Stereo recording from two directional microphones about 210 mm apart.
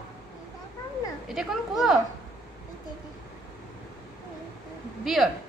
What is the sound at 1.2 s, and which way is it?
Speech, centre (ahead or behind).